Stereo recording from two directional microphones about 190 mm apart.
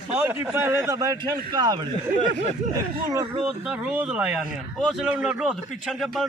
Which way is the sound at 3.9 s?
5° right (ahead or behind).